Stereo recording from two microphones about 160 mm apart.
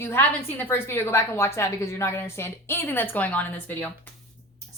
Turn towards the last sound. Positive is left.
turn(degrees=10)  # may be behind; listen again after turning